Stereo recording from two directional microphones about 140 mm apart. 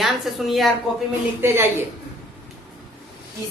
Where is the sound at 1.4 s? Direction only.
15° right (ahead or behind).